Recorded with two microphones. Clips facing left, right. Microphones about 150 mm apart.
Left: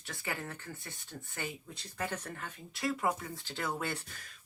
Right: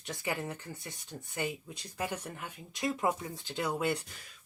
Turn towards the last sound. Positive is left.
turn(degrees=-15)  # may be behind; listen again after turning